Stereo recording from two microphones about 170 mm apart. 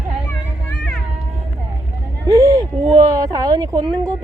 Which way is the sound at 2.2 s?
20° right (ahead or behind).